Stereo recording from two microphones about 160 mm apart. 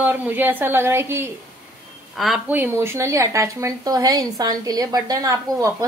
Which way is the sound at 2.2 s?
Centre (ahead or behind).